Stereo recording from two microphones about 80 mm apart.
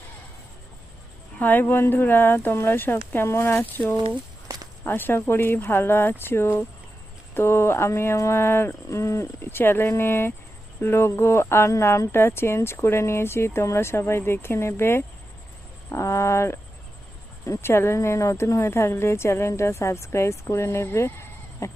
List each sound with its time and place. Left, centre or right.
1.4 s speech: left